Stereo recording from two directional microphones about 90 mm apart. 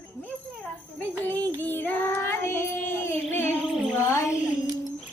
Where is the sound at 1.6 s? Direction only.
20° left (ahead or behind).